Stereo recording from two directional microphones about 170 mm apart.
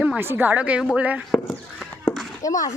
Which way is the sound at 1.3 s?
Centre (ahead or behind).